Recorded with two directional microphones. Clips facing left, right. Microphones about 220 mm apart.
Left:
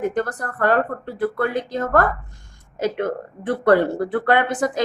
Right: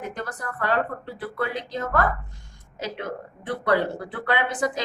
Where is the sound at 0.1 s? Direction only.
50° left (ahead or behind).